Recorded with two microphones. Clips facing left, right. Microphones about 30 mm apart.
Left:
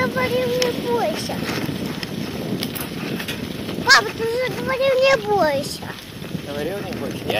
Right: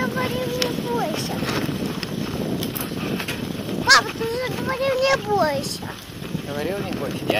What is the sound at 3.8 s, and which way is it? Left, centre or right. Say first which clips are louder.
Speech: left 1 dB; centre.